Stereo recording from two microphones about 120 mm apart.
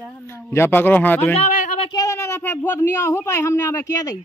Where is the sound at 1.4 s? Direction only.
90° left.